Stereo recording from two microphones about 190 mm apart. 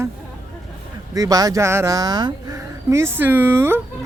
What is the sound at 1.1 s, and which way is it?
Speech, 20° right (ahead or behind).